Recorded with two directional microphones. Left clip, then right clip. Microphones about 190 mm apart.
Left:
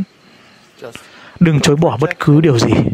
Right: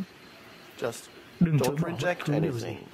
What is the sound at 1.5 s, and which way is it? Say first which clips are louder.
Speech: left 14 dB; 50° left (ahead or behind).